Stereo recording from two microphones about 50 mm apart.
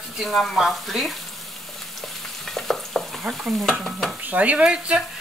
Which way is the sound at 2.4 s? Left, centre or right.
Centre.